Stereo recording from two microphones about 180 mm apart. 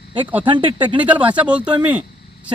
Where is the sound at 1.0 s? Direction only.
10° right (ahead or behind).